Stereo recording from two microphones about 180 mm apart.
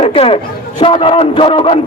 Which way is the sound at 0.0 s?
30° left (ahead or behind).